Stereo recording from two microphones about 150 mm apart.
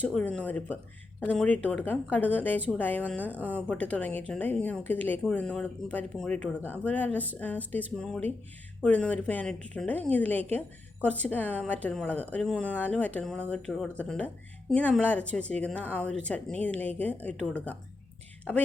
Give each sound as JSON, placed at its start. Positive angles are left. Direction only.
{"t": 0.0, "sound": "a woman's voice", "side_deg": 5}